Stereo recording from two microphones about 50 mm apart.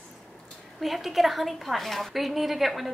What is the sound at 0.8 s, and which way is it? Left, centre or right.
A woman's voice, centre.